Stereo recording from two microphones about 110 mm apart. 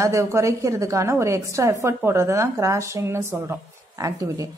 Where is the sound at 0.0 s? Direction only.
25° right (ahead or behind).